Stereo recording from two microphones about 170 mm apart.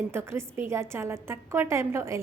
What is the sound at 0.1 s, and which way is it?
A woman's voice, 15° right (ahead or behind).